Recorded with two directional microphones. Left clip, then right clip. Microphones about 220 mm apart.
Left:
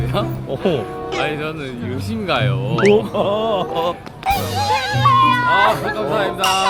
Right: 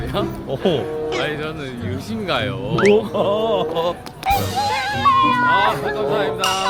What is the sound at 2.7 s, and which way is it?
Speech, centre (ahead or behind).